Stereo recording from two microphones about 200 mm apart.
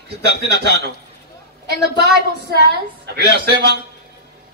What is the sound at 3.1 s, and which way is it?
Speech, 55° right (ahead or behind).